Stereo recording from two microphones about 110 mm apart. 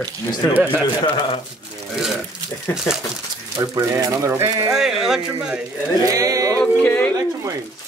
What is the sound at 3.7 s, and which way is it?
Speech, 30° right (ahead or behind).